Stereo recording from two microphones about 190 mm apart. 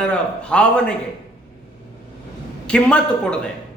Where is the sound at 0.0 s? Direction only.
5° left (ahead or behind).